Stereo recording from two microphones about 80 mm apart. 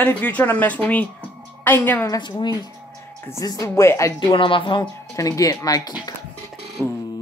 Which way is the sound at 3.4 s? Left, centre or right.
Left.